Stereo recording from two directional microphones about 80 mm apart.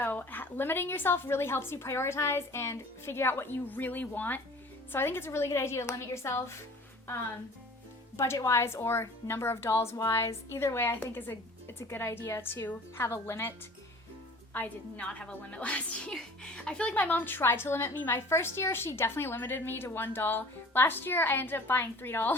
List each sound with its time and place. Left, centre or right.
0.0 s a woman's voice: left
8.1 s a woman's voice: left
14.5 s a woman's voice: centre